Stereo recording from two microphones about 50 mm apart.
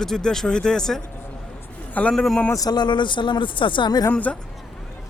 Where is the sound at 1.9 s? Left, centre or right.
Left.